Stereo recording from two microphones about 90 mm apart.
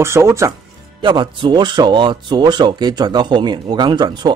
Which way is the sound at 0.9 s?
60° right (ahead or behind).